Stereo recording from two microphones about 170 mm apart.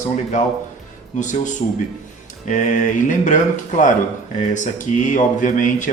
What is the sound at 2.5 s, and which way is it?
Speech, 50° left (ahead or behind).